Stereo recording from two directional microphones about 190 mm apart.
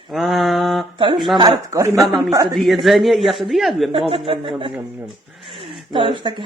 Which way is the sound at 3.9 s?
30° right (ahead or behind).